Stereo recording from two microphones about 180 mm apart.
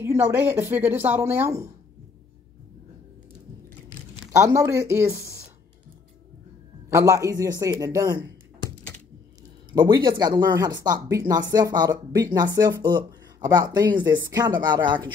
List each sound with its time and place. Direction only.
0.0 s speech: 10° right (ahead or behind)
4.4 s speech: 15° right (ahead or behind)
6.9 s speech: 15° right (ahead or behind)